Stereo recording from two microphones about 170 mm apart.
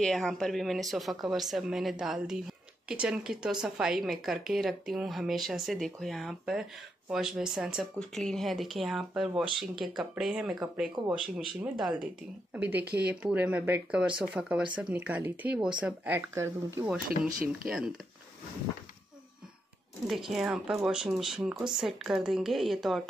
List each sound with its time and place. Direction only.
0.0 s speech: centre (ahead or behind)
12.8 s speech: 70° right (ahead or behind)
13.1 s speech: 10° right (ahead or behind)
17.5 s speech: 5° right (ahead or behind)
20.1 s speech: centre (ahead or behind)